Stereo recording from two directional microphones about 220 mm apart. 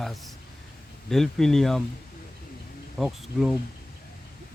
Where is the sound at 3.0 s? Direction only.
5° right (ahead or behind).